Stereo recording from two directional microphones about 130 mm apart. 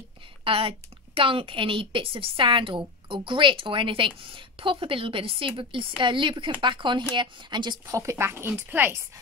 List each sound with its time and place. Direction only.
0.4 s a woman's voice: 45° right (ahead or behind)
8.0 s a woman's voice: 20° right (ahead or behind)